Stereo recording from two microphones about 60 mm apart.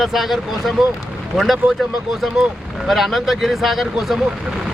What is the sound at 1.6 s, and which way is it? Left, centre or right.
Speech, right.